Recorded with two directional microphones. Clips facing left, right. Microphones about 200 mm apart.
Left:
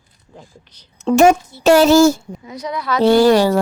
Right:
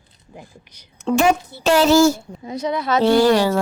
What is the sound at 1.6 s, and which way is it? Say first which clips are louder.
Speech: left 4 dB; 45° left (ahead or behind).